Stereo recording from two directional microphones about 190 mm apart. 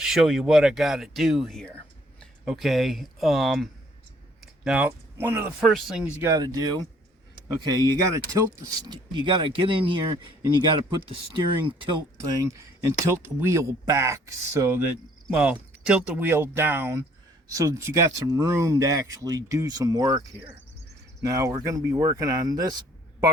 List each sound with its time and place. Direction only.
0.0 s speech: centre (ahead or behind)
6.2 s speech: 20° right (ahead or behind)
11.3 s speech: 25° right (ahead or behind)